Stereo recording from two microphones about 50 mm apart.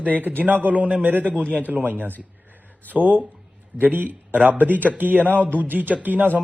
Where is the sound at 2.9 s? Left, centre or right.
Right.